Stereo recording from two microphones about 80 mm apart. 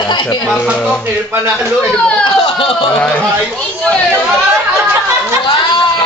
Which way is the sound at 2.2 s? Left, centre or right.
Left.